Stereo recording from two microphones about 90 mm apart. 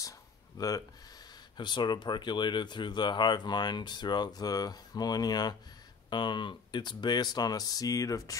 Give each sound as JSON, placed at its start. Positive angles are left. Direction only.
{"t": 0.6, "sound": "speech", "side_deg": 45}
{"t": 1.6, "sound": "speech", "side_deg": 60}